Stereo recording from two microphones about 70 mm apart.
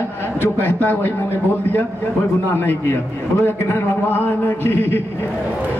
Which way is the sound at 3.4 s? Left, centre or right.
Left.